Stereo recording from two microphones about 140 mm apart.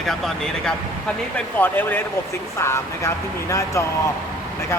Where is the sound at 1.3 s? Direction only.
15° left (ahead or behind).